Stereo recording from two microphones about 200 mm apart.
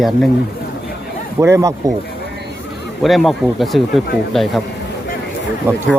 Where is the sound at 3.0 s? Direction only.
Centre (ahead or behind).